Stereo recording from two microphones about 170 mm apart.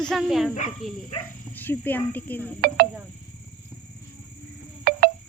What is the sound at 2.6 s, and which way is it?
Speech, 60° right (ahead or behind).